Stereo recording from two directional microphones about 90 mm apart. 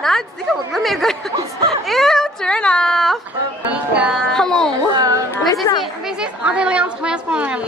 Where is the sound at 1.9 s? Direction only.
Centre (ahead or behind).